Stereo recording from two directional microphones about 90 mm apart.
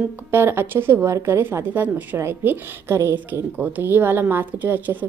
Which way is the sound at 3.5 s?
20° right (ahead or behind).